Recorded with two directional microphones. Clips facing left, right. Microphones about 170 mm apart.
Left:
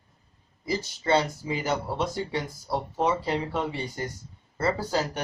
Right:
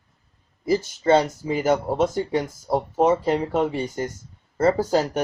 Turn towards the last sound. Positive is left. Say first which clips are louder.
# right 7 dB
turn(degrees=-45)  # may be behind; listen again after turning